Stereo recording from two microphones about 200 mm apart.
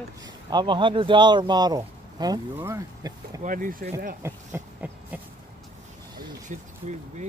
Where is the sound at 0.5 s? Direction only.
25° right (ahead or behind).